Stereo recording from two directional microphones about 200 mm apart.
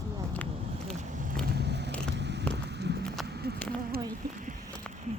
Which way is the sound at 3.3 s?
55° right (ahead or behind).